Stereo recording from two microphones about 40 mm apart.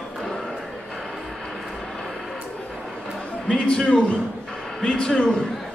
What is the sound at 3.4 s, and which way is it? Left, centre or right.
Speech, left.